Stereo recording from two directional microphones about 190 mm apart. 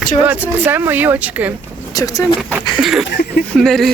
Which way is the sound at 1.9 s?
20° left (ahead or behind).